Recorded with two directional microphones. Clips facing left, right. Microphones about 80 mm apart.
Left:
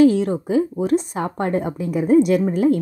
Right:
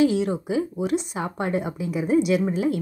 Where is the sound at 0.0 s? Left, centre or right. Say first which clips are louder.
Left 6 dB; left.